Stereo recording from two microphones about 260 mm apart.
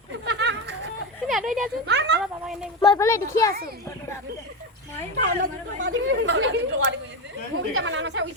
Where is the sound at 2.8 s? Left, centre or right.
Centre.